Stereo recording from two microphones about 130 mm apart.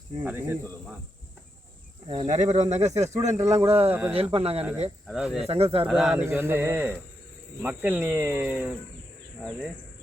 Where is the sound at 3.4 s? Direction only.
25° right (ahead or behind).